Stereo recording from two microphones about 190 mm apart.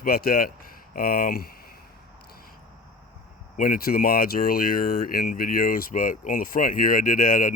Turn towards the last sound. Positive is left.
turn(degrees=45)  # may be behind; listen again after turning